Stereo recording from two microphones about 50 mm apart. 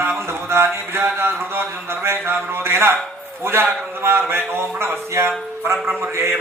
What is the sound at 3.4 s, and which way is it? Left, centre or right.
Music, right.